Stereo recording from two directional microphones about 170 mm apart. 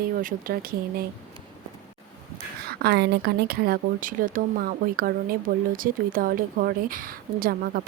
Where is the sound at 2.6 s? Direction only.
70° right (ahead or behind).